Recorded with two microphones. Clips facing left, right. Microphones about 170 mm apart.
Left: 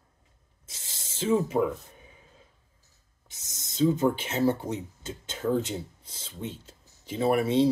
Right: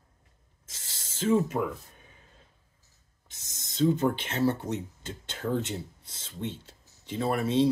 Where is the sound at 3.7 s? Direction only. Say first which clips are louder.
Left 1 dB; 10° left (ahead or behind).